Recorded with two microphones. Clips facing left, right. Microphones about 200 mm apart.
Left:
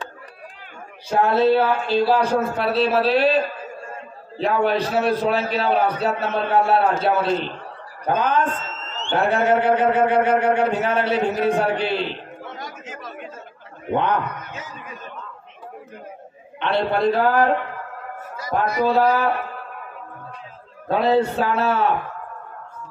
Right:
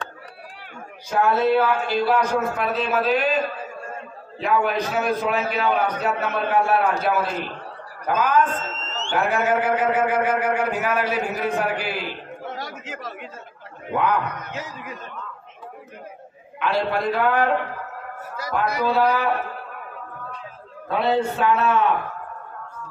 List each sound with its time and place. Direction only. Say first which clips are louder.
1.1 s a man's voice: left 2 dB; 30° left (ahead or behind)
12.6 s chatter: right 1 dB; 70° right (ahead or behind)
13.9 s a man's voice: left 1 dB; 30° left (ahead or behind)
16.5 s a man's voice: left 2 dB; 30° left (ahead or behind)
18.9 s a man's voice: left 2 dB; 40° left (ahead or behind)
20.9 s a man's voice: left 3 dB; 35° left (ahead or behind)